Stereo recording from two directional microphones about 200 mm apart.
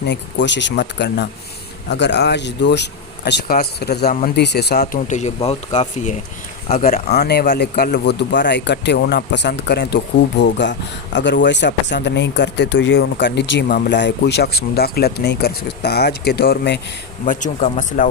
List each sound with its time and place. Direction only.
0.1 s speech: 60° left (ahead or behind)
4.8 s speech: 35° left (ahead or behind)
6.7 s speech: 45° left (ahead or behind)
17.2 s speech: 40° left (ahead or behind)